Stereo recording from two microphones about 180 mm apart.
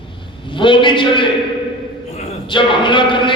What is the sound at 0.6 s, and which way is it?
Speech, 25° left (ahead or behind).